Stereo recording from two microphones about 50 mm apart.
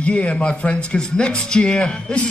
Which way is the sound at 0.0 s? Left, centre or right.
Left.